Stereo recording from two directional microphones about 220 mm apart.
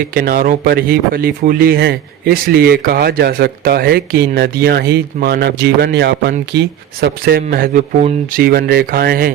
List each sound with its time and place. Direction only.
0.1 s speech: 40° right (ahead or behind)